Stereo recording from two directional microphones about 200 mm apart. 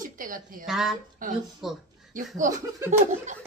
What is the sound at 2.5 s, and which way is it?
Speech, 15° right (ahead or behind).